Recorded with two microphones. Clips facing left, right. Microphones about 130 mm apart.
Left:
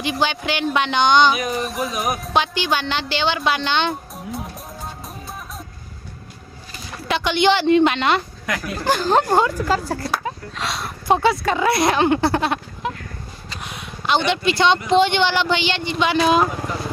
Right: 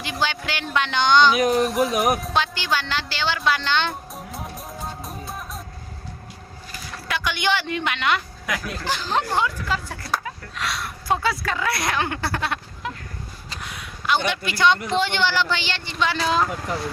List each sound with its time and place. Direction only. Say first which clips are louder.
0.0 s speech: left 4 dB; 20° left (ahead or behind)
1.6 s speech: right 4 dB; centre (ahead or behind)
2.3 s speech: left 3 dB; 20° left (ahead or behind)
4.1 s music: left 3 dB; centre (ahead or behind)
7.1 s speech: left 7 dB; 25° left (ahead or behind)
8.4 s speech: right 1 dB; centre (ahead or behind)
8.8 s speech: left 9 dB; 45° left (ahead or behind)
10.2 s speech: left 3 dB; 25° left (ahead or behind)
13.6 s a sound: left 3 dB; 20° left (ahead or behind)
14.3 s speech: left 3 dB; 25° left (ahead or behind)